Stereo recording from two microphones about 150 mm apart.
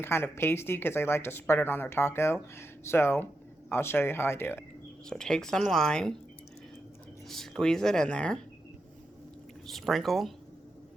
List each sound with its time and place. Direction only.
0.0 s speech: 15° left (ahead or behind)
5.0 s speech: 5° left (ahead or behind)
7.3 s speech: centre (ahead or behind)
9.6 s speech: centre (ahead or behind)